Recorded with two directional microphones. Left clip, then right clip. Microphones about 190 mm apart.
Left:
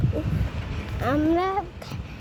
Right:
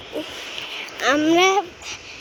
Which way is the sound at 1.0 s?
10° right (ahead or behind).